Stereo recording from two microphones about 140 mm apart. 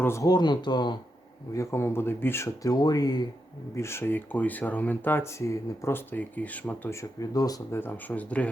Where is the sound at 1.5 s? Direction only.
20° left (ahead or behind).